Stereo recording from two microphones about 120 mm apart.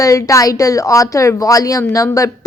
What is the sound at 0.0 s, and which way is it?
A woman's voice, 25° left (ahead or behind).